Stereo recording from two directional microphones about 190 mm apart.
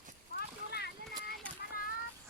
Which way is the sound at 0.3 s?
60° left (ahead or behind).